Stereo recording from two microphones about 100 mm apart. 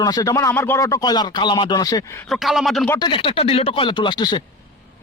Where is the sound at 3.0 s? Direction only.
55° left (ahead or behind).